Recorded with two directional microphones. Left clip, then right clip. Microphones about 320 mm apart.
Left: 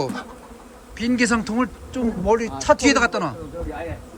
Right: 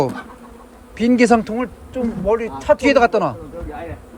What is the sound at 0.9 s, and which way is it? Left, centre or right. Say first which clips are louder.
Speech: right 7 dB; centre.